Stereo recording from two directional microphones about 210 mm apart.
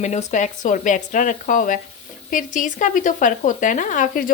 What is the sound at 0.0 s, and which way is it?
Speech, 35° left (ahead or behind).